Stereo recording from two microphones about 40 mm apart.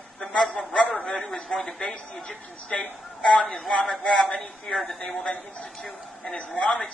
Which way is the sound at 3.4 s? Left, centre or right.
Centre.